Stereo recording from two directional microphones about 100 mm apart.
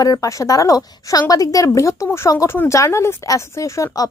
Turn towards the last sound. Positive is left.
turn(degrees=35)  # may be behind; listen again after turning